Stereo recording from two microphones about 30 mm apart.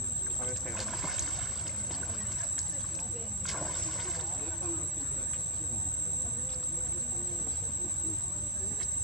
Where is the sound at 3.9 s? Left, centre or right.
Centre.